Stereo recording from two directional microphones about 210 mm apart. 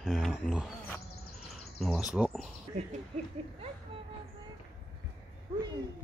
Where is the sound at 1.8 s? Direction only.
Centre (ahead or behind).